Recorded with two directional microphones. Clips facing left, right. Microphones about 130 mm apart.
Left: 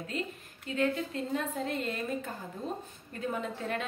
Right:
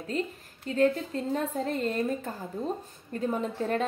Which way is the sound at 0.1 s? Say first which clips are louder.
Right 5 dB; 40° right (ahead or behind).